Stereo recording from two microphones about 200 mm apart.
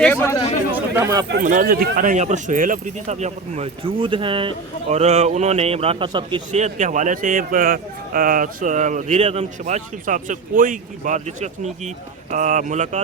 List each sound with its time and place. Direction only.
0.0 s speech: 10° left (ahead or behind)
0.7 s a sound: 15° right (ahead or behind)
1.4 s speech: 40° right (ahead or behind); by 6.4 s 25° right (ahead or behind)
6.5 s speech: 35° right (ahead or behind)